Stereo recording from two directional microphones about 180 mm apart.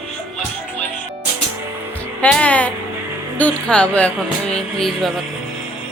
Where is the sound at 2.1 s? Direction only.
5° left (ahead or behind).